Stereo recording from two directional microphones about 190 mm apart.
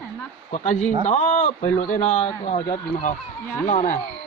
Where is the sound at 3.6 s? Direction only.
40° left (ahead or behind).